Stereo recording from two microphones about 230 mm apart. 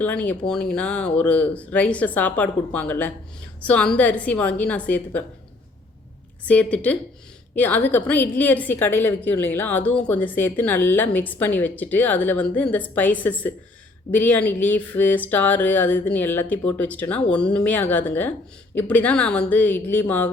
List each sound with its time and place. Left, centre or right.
0.0 s a woman's voice: centre
6.4 s a woman's voice: centre